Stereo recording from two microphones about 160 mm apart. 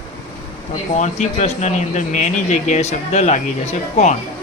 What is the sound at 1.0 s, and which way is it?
Speech, 45° left (ahead or behind).